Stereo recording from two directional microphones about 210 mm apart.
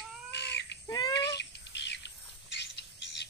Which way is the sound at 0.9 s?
20° left (ahead or behind).